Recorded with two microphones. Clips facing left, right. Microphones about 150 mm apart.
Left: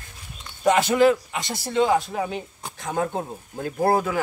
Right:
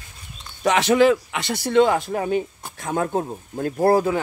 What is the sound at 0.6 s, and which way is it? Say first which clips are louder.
Speech: right 1 dB; 85° right.